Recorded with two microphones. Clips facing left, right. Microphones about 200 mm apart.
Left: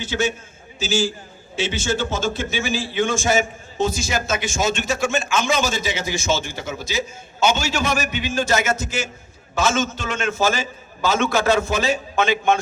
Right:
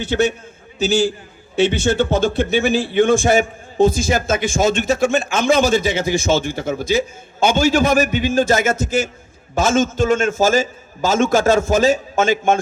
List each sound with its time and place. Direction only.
0.0 s a man's voice: 60° right (ahead or behind)